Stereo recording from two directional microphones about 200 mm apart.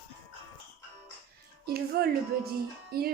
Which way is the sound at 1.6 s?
50° right (ahead or behind).